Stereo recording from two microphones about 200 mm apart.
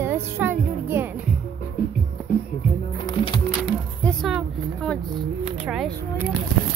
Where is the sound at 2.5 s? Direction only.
25° left (ahead or behind).